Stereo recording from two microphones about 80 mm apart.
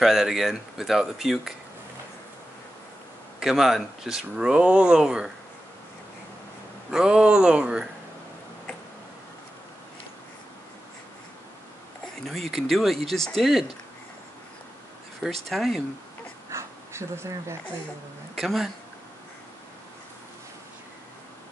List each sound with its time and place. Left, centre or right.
0.0 s speech: centre
3.3 s speech: centre
6.9 s speech: centre
12.3 s speech: centre
15.2 s speech: centre
16.4 s a sound: right
18.3 s speech: centre